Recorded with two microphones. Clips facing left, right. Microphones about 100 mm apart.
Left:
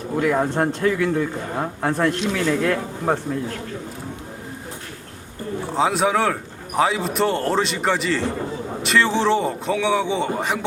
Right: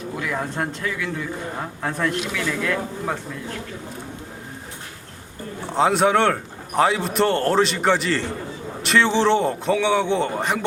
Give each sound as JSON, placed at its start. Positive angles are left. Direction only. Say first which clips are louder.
{"t": 0.3, "sound": "speech", "louder": "left 6 dB", "side_deg": 30}
{"t": 5.6, "sound": "a man's voice", "louder": "right 2 dB", "side_deg": 0}